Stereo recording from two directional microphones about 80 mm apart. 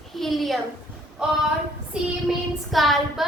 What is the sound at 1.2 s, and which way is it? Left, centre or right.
A child's voice, centre.